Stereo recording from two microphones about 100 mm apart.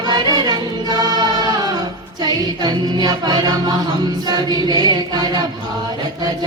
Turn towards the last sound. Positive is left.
turn(degrees=-40)  # may be behind; listen again after turning